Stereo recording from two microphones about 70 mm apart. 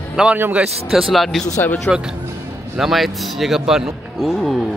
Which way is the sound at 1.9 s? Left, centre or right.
Left.